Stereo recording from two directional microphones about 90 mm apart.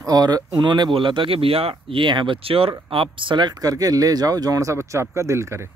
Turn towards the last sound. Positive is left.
turn(degrees=-30)  # may be behind; listen again after turning